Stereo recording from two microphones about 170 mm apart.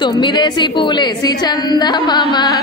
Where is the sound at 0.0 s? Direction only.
25° left (ahead or behind).